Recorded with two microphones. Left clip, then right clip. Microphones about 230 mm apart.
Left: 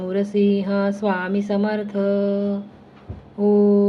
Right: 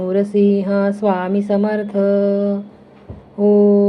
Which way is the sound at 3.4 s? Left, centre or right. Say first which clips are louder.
Right 4 dB; centre.